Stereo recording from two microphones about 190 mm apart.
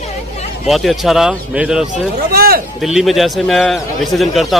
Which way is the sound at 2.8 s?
Centre (ahead or behind).